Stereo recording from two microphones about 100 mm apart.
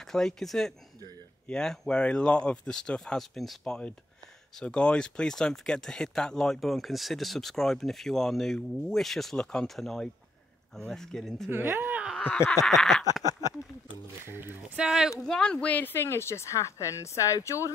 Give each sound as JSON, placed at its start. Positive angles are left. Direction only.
{"t": 0.0, "sound": "speech", "side_deg": 5}
{"t": 11.5, "sound": "speech", "side_deg": -20}
{"t": 12.6, "sound": "speech", "side_deg": 0}
{"t": 13.4, "sound": "speech", "side_deg": 35}
{"t": 14.2, "sound": "speech", "side_deg": -20}
{"t": 14.8, "sound": "speech", "side_deg": -5}